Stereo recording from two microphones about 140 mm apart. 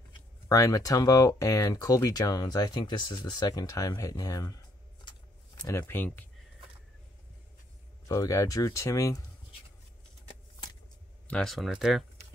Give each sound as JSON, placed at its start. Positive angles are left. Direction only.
{"t": 0.5, "sound": "speech", "side_deg": 25}
{"t": 5.6, "sound": "speech", "side_deg": 20}
{"t": 8.1, "sound": "speech", "side_deg": 25}
{"t": 11.2, "sound": "speech", "side_deg": 5}